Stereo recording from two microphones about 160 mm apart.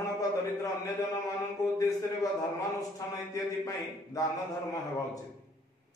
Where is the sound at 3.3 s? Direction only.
20° left (ahead or behind).